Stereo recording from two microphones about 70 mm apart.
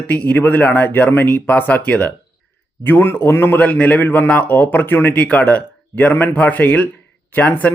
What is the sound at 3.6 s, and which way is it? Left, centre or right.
Speech, left.